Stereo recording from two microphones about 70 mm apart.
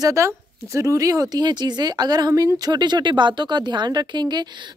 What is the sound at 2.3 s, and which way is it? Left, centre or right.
Speech, right.